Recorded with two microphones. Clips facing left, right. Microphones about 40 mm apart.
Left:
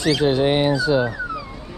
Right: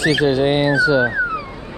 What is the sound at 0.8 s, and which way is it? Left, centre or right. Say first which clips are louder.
Speech: right 4 dB; right.